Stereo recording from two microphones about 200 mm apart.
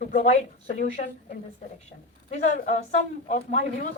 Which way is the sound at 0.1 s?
35° left (ahead or behind).